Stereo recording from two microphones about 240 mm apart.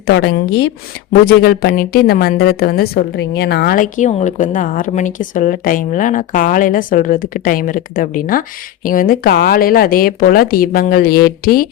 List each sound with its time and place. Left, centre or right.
0.1 s a woman's voice: left